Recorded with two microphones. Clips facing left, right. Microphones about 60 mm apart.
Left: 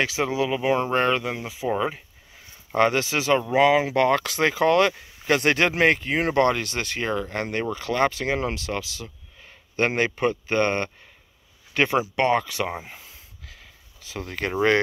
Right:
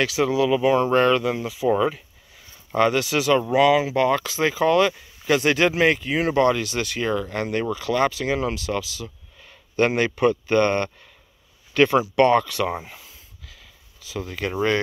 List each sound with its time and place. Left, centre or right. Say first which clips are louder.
0.0 s speech: right 3 dB; left
2.7 s speech: right 1 dB; left
3.8 s speech: even; left
13.5 s a sound: left 1 dB; left
14.2 s speech: left 2 dB; left